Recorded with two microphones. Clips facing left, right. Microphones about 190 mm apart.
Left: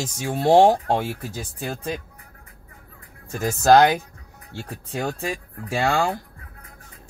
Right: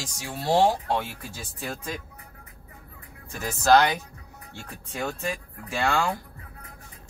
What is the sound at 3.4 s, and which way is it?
Speech, 45° left (ahead or behind).